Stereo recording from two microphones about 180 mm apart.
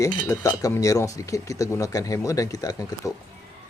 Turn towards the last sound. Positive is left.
turn(degrees=20)  # may be behind; listen again after turning